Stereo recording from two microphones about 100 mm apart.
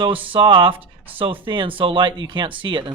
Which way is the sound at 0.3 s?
55° right (ahead or behind).